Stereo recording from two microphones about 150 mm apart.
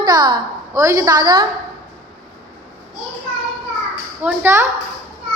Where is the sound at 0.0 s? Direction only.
25° right (ahead or behind).